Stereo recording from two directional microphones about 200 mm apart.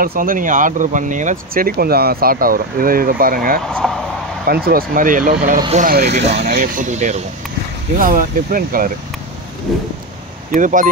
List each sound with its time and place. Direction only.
0.0 s speech: 45° right (ahead or behind)
3.6 s speech: centre (ahead or behind)
4.5 s speech: 50° right (ahead or behind)
6.1 s speech: 35° right (ahead or behind)
9.7 s vehicle: centre (ahead or behind)
10.5 s speech: 40° right (ahead or behind)